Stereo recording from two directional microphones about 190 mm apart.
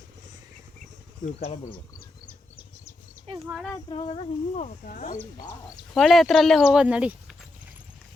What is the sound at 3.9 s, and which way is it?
Speech, 35° left (ahead or behind).